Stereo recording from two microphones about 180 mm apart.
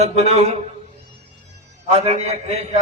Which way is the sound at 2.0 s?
35° right (ahead or behind).